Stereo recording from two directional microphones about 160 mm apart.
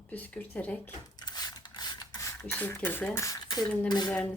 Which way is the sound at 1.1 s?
25° left (ahead or behind).